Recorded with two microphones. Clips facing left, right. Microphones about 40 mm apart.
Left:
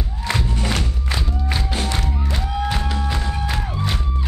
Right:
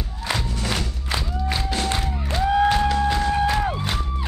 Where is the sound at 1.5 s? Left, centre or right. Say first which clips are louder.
Even; centre.